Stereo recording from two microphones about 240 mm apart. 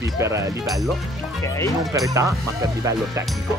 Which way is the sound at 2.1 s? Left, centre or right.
Centre.